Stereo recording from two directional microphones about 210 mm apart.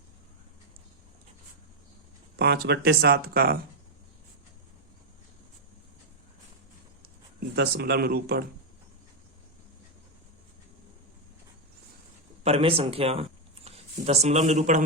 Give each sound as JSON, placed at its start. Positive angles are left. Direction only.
{"t": 2.3, "sound": "speech", "side_deg": -50}
{"t": 7.0, "sound": "a sound", "side_deg": -50}
{"t": 12.4, "sound": "speech", "side_deg": -30}